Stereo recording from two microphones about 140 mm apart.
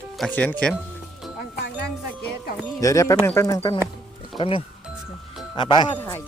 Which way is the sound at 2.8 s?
25° left (ahead or behind).